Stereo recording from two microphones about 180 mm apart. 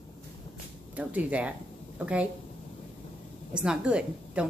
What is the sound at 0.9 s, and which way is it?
Speech, 10° right (ahead or behind).